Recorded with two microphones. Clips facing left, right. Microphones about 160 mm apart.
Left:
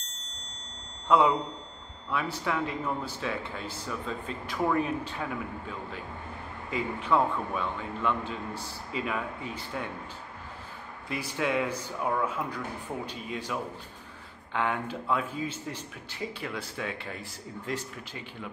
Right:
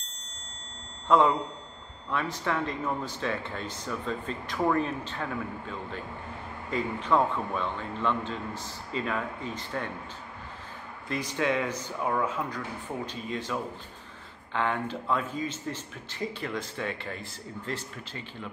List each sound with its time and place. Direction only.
1.1 s speech: 10° left (ahead or behind)
6.7 s speech: 10° left (ahead or behind)
11.1 s speech: 5° left (ahead or behind)